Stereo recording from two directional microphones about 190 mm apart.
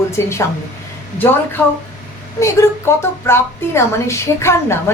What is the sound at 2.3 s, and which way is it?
A woman's voice, 15° left (ahead or behind).